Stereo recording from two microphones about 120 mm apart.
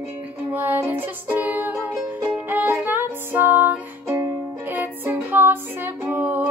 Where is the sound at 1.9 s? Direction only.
5° right (ahead or behind).